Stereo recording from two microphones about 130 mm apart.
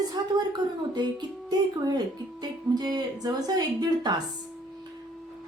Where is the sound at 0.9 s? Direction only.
35° right (ahead or behind).